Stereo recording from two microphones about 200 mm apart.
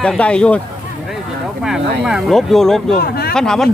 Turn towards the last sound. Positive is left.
turn(degrees=5)  # may be behind; listen again after turning